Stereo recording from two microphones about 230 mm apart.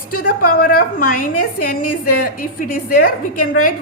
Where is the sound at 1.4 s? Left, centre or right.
Left.